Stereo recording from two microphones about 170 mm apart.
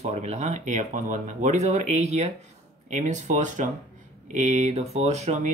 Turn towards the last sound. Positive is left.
turn(degrees=-40)  # may be behind; listen again after turning